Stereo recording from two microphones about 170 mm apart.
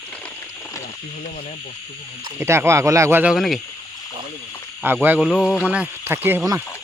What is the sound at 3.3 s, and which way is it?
Speech, centre (ahead or behind).